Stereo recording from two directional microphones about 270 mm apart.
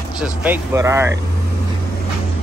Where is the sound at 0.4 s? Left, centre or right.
Centre.